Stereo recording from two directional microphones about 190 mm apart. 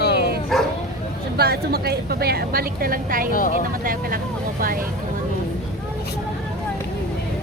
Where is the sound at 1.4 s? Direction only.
55° right (ahead or behind).